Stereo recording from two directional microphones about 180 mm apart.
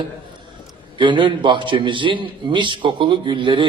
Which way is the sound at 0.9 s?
25° right (ahead or behind).